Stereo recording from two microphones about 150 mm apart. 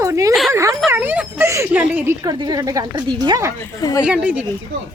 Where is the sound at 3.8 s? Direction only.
25° left (ahead or behind).